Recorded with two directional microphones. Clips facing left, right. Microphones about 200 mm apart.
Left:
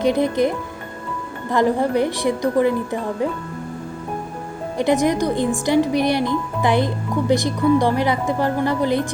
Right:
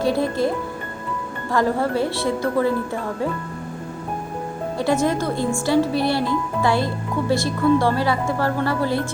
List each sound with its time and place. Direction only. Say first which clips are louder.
0.0 s speech: left 2 dB; 20° left (ahead or behind)
4.8 s speech: left 3 dB; 20° left (ahead or behind)